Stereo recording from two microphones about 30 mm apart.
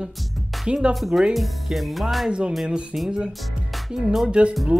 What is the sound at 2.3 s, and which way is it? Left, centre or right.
Speech, right.